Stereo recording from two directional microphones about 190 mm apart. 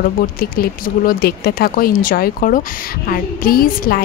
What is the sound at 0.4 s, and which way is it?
A woman's voice, 50° left (ahead or behind).